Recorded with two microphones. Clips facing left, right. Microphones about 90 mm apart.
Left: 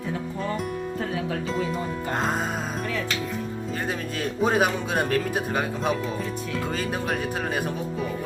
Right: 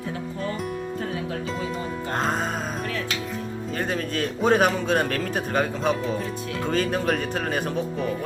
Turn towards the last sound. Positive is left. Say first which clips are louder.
# right 2 dB
turn(degrees=5)  # may be behind; listen again after turning